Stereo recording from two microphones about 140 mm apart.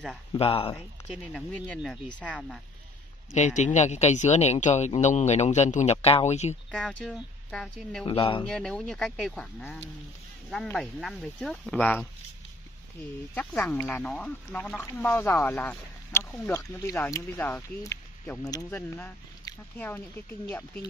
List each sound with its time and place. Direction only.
0.4 s speech: 40° left (ahead or behind)
1.1 s speech: centre (ahead or behind)
3.3 s speech: 55° left (ahead or behind)
6.7 s speech: 5° left (ahead or behind)
8.0 s speech: 40° left (ahead or behind)
8.5 s speech: 5° left (ahead or behind)
13.3 s speech: 10° left (ahead or behind); by 18.7 s 25° left (ahead or behind)
18.7 s speech: 15° left (ahead or behind)
19.5 s speech: 25° left (ahead or behind)
19.8 s speech: 10° left (ahead or behind)